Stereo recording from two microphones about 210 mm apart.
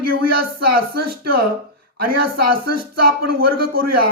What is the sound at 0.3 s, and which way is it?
A man's voice, 45° right (ahead or behind).